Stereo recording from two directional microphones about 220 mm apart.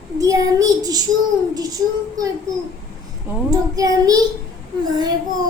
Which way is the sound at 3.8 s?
15° right (ahead or behind).